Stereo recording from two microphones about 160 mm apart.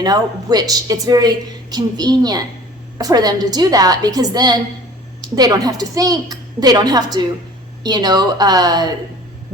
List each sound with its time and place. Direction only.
0.0 s a woman's voice: 25° right (ahead or behind)